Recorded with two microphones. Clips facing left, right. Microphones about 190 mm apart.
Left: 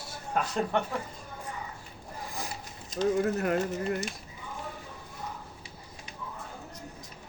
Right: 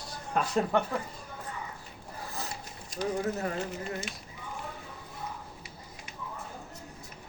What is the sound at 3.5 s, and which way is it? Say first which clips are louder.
Speech: left 5 dB; 50° left (ahead or behind).